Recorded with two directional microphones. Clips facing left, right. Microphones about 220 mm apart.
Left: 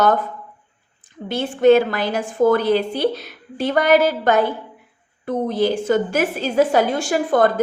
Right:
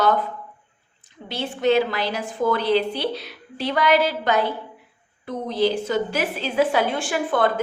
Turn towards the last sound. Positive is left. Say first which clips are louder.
# left 5 dB
turn(degrees=40)  # may be behind; listen again after turning